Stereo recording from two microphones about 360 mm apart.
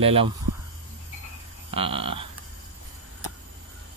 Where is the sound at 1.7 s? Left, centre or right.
Centre.